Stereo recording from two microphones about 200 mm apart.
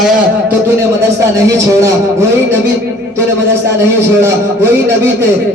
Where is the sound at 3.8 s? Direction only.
10° right (ahead or behind).